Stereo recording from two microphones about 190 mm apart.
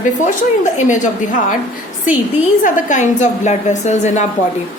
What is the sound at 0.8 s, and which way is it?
Speech, 40° left (ahead or behind).